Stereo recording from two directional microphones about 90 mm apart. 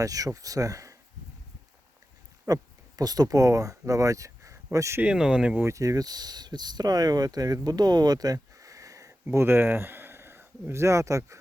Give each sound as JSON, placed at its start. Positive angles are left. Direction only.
{"t": 0.0, "sound": "speech", "side_deg": -40}
{"t": 2.5, "sound": "speech", "side_deg": -45}
{"t": 5.0, "sound": "speech", "side_deg": -10}
{"t": 5.6, "sound": "speech", "side_deg": -40}
{"t": 9.3, "sound": "speech", "side_deg": -25}